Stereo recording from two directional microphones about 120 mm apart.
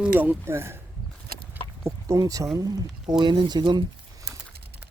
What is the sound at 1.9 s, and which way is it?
Speech, 25° right (ahead or behind).